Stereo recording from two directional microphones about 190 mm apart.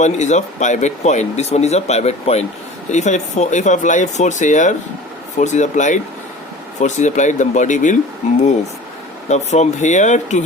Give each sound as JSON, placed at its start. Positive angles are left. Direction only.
{"t": 0.0, "sound": "speech", "side_deg": 40}
{"t": 9.3, "sound": "speech", "side_deg": 35}